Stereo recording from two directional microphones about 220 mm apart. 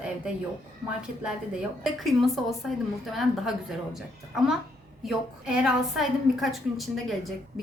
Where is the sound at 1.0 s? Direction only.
5° right (ahead or behind).